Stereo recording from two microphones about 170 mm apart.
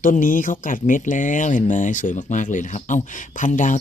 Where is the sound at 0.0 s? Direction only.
50° left (ahead or behind).